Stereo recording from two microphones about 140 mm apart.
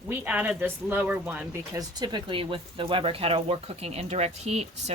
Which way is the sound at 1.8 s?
30° right (ahead or behind).